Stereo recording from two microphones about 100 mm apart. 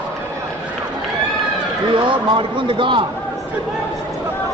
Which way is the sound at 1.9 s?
55° right (ahead or behind).